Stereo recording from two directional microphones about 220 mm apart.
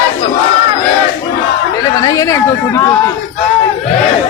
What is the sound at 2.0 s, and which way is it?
Speech, 15° left (ahead or behind).